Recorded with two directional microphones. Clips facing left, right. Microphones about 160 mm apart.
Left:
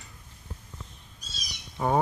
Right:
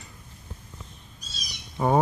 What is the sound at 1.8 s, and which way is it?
Speech, 15° right (ahead or behind).